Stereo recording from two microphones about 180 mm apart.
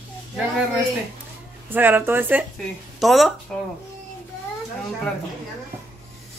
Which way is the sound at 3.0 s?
Centre (ahead or behind).